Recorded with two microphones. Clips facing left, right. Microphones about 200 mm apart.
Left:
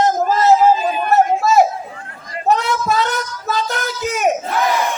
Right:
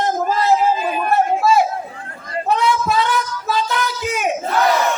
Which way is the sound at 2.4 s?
45° left (ahead or behind).